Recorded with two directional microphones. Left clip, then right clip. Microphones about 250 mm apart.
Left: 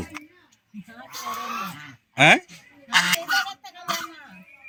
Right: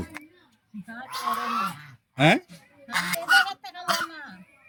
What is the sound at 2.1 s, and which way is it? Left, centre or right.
Speech, centre.